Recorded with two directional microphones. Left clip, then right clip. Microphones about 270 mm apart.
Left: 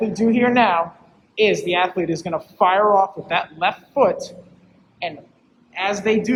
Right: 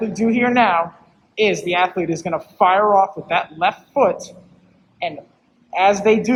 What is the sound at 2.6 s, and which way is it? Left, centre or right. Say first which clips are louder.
Speech: right 1 dB; centre.